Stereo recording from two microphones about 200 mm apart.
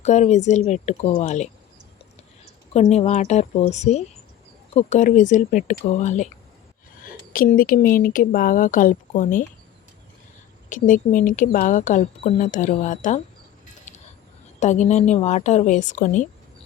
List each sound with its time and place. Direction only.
0.0 s a woman's voice: 35° left (ahead or behind)
2.7 s a woman's voice: 35° left (ahead or behind)
10.7 s a woman's voice: 40° left (ahead or behind)
14.6 s a woman's voice: 35° left (ahead or behind)